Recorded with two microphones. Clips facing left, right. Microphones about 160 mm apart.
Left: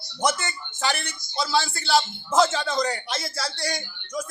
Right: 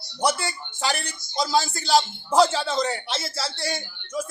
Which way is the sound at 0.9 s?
35° right (ahead or behind).